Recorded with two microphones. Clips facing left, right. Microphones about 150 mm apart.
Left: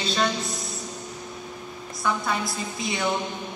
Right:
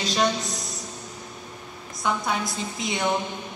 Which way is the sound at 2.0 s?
20° right (ahead or behind).